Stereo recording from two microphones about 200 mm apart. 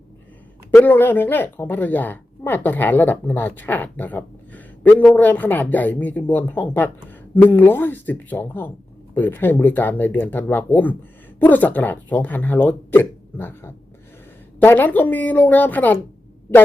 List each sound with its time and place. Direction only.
0.7 s a woman's voice: 10° left (ahead or behind)